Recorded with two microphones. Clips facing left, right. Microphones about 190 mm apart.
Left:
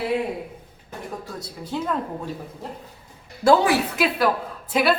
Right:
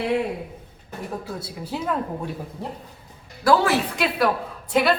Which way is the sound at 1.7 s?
5° right (ahead or behind).